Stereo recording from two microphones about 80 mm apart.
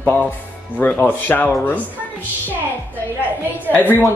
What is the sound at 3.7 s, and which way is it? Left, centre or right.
Speech, left.